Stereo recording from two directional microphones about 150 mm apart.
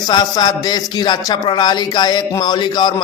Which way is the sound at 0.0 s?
25° left (ahead or behind).